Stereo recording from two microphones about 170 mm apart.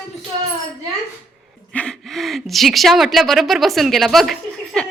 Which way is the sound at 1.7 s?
5° left (ahead or behind).